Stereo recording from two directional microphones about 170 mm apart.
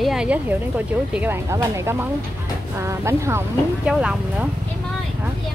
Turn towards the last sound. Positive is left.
turn(degrees=-5)  # may be behind; listen again after turning